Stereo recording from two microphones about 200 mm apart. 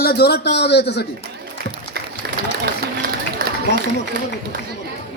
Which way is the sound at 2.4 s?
50° right (ahead or behind).